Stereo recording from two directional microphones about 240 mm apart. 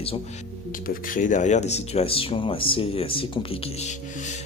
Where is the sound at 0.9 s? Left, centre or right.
Left.